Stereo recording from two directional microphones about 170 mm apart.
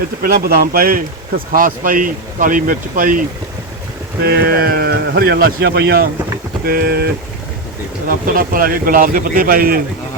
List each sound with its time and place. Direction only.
0.2 s speech: 65° right (ahead or behind)
4.2 s speech: 60° right (ahead or behind)